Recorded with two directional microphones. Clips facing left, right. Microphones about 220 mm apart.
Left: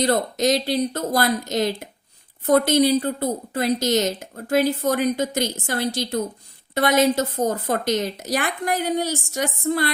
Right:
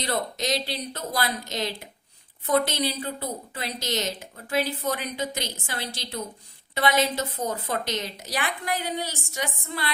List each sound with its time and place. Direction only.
0.0 s speech: 45° left (ahead or behind)